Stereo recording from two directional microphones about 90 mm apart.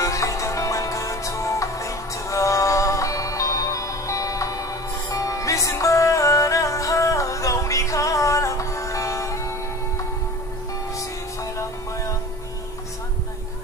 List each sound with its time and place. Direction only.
0.0 s music: 35° left (ahead or behind)